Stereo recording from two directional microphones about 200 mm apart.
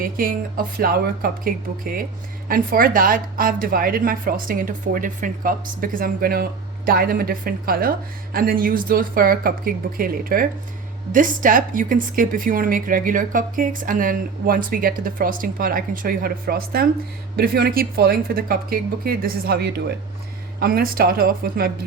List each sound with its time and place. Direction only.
0.0 s a woman's voice: 45° right (ahead or behind)